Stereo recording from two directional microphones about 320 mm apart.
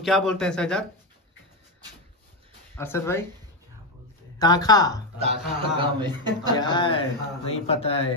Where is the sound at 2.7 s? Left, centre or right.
Centre.